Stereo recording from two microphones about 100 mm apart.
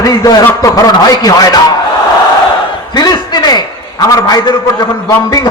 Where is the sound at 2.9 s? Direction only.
40° left (ahead or behind).